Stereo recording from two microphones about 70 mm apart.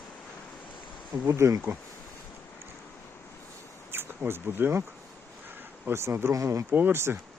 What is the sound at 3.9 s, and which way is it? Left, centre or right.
Speech, right.